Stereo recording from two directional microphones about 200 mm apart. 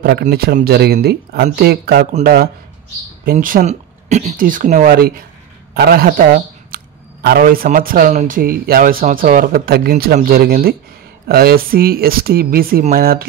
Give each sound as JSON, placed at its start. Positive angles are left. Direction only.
{"t": 0.0, "sound": "speech", "side_deg": -50}